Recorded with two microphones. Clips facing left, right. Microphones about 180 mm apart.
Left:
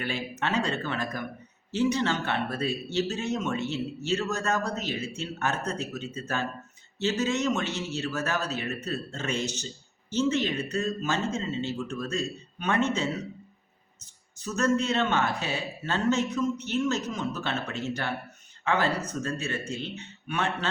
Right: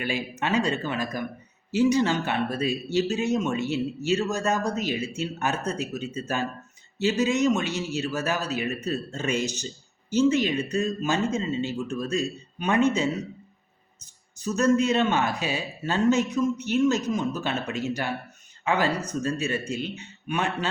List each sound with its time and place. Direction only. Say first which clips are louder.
0.0 s speech: right 2 dB; 10° right (ahead or behind)
14.3 s speech: right 4 dB; 10° right (ahead or behind)